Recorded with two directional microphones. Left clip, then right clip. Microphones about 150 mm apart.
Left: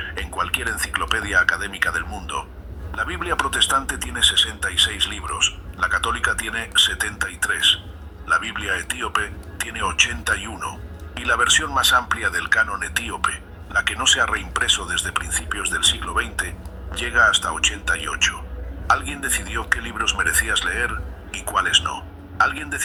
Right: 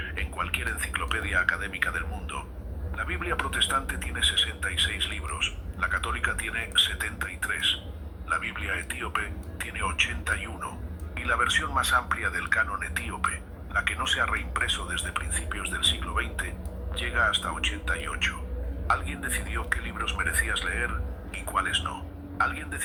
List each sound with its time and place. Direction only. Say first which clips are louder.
0.0 s a man's voice: left 7 dB; 35° left (ahead or behind)